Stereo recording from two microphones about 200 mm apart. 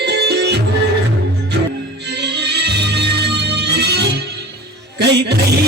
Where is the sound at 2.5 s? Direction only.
55° right (ahead or behind).